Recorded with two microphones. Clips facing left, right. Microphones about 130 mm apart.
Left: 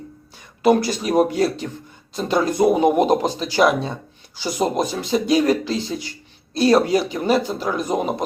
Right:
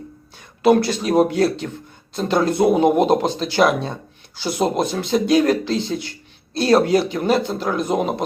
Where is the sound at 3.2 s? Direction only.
10° left (ahead or behind).